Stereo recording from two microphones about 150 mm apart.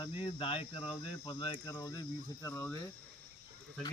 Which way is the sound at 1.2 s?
30° left (ahead or behind).